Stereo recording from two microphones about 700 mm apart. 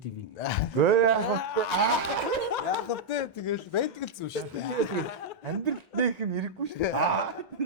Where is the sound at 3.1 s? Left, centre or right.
Left.